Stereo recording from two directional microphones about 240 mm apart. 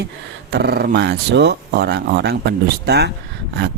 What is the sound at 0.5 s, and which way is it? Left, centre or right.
Speech, right.